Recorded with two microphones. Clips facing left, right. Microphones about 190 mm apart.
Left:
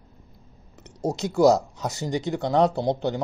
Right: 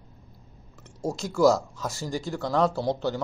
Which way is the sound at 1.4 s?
65° left (ahead or behind).